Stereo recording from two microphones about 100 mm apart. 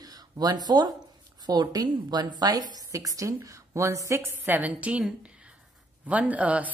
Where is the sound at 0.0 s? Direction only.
40° right (ahead or behind); by 5.0 s 15° right (ahead or behind).